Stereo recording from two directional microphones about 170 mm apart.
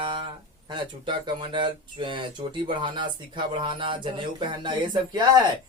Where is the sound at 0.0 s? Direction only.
30° right (ahead or behind).